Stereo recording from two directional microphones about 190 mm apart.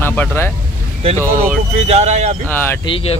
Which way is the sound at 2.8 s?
30° left (ahead or behind).